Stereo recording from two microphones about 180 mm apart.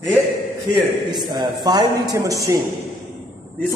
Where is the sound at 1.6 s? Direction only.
20° right (ahead or behind).